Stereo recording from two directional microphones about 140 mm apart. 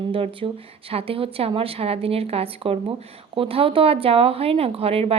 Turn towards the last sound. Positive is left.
turn(degrees=-45)  # may be behind; listen again after turning